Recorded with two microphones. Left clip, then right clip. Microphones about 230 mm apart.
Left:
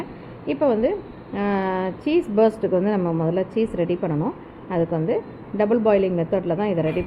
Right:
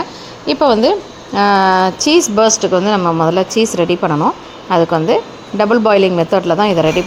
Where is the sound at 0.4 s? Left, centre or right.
Right.